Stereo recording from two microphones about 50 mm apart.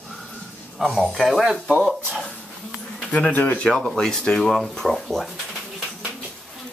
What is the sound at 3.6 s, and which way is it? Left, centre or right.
Speech, centre.